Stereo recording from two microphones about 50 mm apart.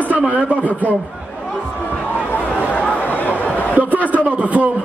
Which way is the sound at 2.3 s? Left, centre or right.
Left.